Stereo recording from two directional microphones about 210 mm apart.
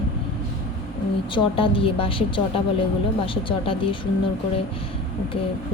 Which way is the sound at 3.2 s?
25° left (ahead or behind).